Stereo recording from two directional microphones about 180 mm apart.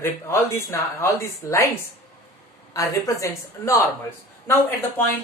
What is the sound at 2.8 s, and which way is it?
Speech, 15° left (ahead or behind).